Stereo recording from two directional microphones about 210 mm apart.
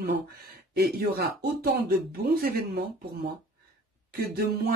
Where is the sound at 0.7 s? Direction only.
45° right (ahead or behind).